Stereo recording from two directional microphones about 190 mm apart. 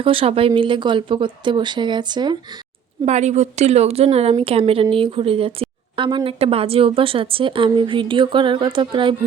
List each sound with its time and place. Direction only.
0.0 s a woman's voice: 30° right (ahead or behind)
3.1 s a woman's voice: 35° right (ahead or behind)